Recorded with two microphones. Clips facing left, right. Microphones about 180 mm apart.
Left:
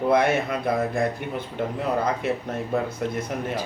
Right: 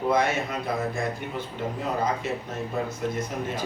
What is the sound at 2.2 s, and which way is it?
Speech, 60° left (ahead or behind).